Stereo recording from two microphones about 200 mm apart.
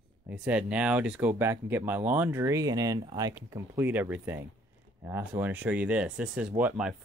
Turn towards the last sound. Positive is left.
turn(degrees=-5)  # may be behind; listen again after turning